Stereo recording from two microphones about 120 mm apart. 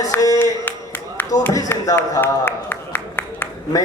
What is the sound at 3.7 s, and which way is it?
Speech, 30° left (ahead or behind).